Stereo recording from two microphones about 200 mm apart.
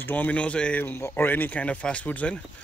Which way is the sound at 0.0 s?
10° left (ahead or behind).